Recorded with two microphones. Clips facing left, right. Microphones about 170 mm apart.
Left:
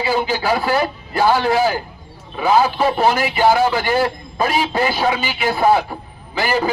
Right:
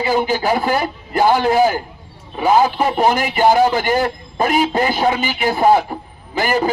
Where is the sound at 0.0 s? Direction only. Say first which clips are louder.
Right 2 dB; 15° right (ahead or behind).